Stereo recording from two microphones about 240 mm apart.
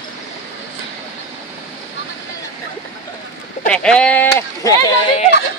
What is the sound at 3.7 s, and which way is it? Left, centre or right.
Speech, centre.